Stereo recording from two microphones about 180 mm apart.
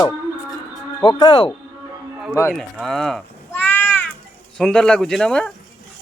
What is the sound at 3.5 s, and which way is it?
Cat, 10° left (ahead or behind).